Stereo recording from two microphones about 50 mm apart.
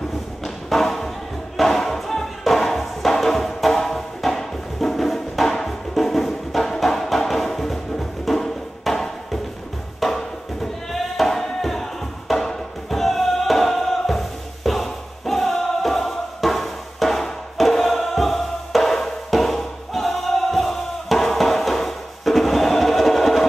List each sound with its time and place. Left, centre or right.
0.4 s a sound: centre
1.6 s music: centre
9.9 s sheep: centre